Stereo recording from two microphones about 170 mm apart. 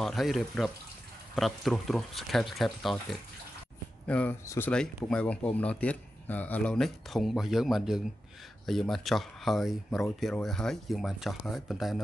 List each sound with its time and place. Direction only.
0.0 s speech: centre (ahead or behind)